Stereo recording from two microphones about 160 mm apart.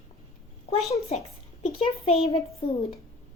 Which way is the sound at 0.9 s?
40° left (ahead or behind).